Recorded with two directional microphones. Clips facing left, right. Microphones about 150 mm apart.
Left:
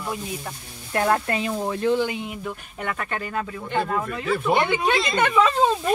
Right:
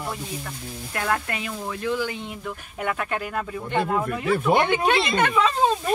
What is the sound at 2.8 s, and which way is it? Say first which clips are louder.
Speech: right 2 dB; 5° right (ahead or behind).